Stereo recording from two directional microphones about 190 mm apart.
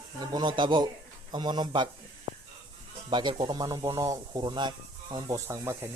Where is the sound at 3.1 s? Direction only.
25° right (ahead or behind).